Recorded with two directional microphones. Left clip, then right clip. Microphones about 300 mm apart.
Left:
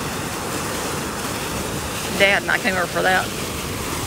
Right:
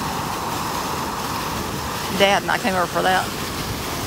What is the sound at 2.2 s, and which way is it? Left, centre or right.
Speech, centre.